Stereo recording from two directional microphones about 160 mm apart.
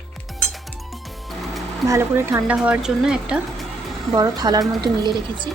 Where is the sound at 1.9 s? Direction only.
15° right (ahead or behind).